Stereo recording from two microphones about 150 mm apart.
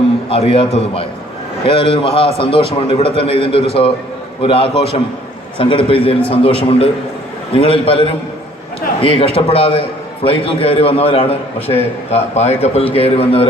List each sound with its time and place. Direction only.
0.3 s a man's voice: 40° left (ahead or behind)